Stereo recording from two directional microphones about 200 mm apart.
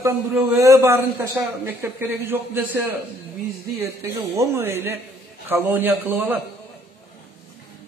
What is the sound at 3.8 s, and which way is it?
A man's voice, 15° right (ahead or behind).